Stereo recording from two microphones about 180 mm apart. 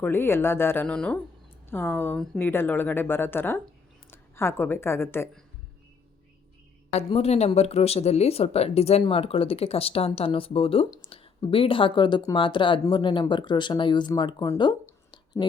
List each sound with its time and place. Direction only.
0.0 s a woman's voice: 10° left (ahead or behind)
6.9 s speech: 35° left (ahead or behind)
15.1 s whispering: 25° left (ahead or behind)